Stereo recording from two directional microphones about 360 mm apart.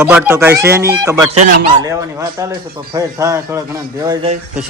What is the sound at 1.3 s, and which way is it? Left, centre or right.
A man's voice, centre.